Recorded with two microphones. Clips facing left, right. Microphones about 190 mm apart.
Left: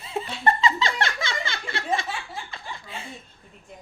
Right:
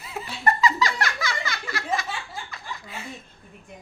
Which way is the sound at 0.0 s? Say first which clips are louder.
Left 2 dB; 25° left (ahead or behind).